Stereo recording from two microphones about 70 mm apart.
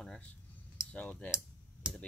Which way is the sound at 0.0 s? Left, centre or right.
Centre.